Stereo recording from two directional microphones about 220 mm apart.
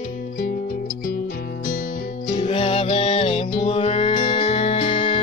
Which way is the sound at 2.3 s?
25° left (ahead or behind).